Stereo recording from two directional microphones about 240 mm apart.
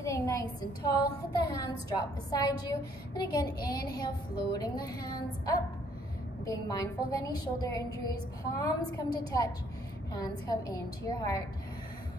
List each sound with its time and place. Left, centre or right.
0.0 s a woman's voice: centre